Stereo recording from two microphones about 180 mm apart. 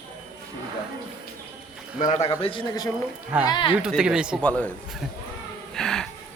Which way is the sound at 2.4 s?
30° left (ahead or behind).